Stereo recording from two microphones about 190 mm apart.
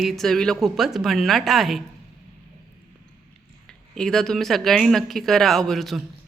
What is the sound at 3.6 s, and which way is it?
A woman's voice, 5° left (ahead or behind).